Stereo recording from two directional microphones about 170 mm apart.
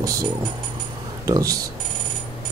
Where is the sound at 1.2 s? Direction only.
20° right (ahead or behind).